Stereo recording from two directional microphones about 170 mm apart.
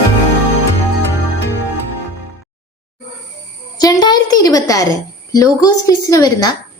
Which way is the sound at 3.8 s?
20° left (ahead or behind).